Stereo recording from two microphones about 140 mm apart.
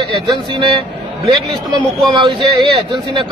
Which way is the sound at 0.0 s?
35° right (ahead or behind).